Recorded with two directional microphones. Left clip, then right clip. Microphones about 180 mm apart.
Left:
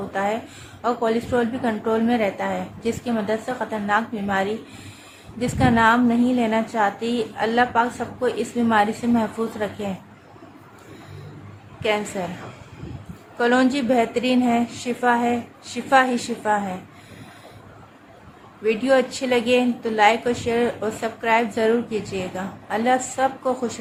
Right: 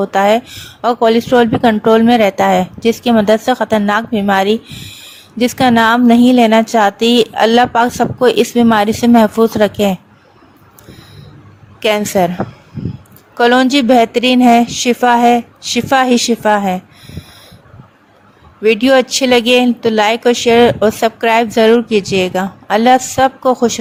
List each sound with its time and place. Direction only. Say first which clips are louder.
0.1 s a woman's voice: right 11 dB; 55° right (ahead or behind)
11.8 s a woman's voice: right 10 dB; 60° right (ahead or behind)
13.4 s a woman's voice: right 9 dB; 50° right (ahead or behind)
18.6 s a woman's voice: right 9 dB; 55° right (ahead or behind)